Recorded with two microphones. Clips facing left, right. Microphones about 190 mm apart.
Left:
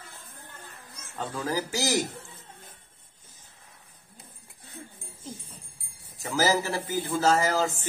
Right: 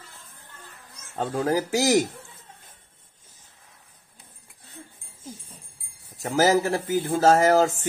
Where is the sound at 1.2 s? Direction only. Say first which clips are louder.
Right 6 dB; 55° right (ahead or behind).